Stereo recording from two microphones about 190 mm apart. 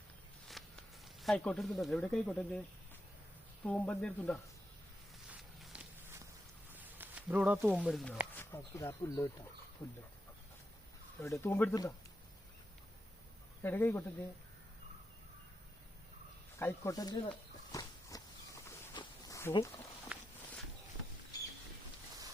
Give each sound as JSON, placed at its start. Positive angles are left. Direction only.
{"t": 0.6, "sound": "walk", "side_deg": 0}
{"t": 1.2, "sound": "speech", "side_deg": 0}
{"t": 3.6, "sound": "speech", "side_deg": 10}
{"t": 5.3, "sound": "walk", "side_deg": -5}
{"t": 6.7, "sound": "a sound", "side_deg": -10}
{"t": 7.8, "sound": "speech", "side_deg": 5}
{"t": 8.4, "sound": "speech", "side_deg": 15}
{"t": 11.2, "sound": "speech", "side_deg": 15}
{"t": 13.6, "sound": "speech", "side_deg": 10}
{"t": 16.6, "sound": "speech", "side_deg": 15}
{"t": 17.7, "sound": "walk", "side_deg": 20}
{"t": 18.9, "sound": "a sound", "side_deg": 20}
{"t": 19.5, "sound": "speech", "side_deg": 15}
{"t": 20.1, "sound": "walk", "side_deg": -5}